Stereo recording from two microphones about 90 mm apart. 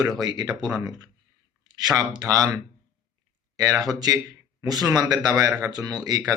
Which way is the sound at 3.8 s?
45° right (ahead or behind).